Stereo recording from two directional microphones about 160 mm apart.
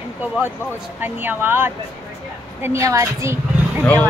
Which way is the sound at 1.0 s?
10° right (ahead or behind).